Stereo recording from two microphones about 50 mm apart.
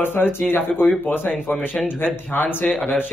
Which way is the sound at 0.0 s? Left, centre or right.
Left.